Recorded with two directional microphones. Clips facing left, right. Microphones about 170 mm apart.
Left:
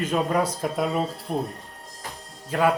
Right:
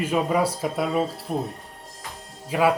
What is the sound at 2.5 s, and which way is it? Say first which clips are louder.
Speech: right 1 dB; 10° right (ahead or behind).